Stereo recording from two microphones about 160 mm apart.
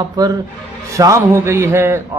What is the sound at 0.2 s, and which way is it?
A man's voice, 20° right (ahead or behind).